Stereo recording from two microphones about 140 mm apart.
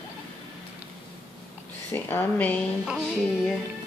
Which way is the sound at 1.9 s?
15° left (ahead or behind).